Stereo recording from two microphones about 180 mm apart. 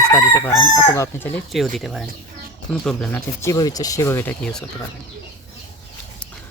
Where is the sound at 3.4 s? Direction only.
20° left (ahead or behind); by 4.6 s 5° left (ahead or behind).